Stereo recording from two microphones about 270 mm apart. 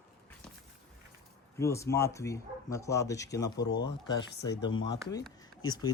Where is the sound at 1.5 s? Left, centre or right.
Centre.